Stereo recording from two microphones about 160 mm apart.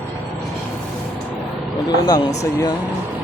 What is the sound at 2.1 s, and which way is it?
Speech, 25° left (ahead or behind).